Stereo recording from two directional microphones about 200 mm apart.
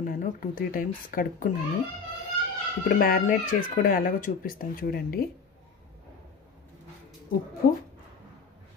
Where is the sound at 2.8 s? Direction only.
50° left (ahead or behind).